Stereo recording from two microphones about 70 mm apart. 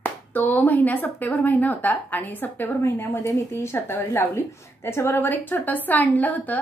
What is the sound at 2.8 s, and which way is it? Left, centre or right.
A woman's voice, left.